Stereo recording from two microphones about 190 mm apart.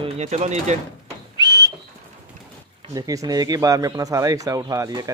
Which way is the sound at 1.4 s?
20° right (ahead or behind).